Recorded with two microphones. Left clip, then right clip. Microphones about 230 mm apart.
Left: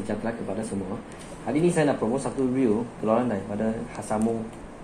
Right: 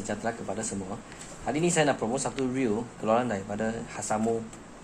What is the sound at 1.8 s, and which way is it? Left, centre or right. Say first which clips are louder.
Speech: left 2 dB; right.